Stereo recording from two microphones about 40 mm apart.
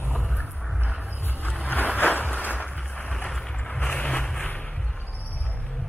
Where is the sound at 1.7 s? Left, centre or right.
Left.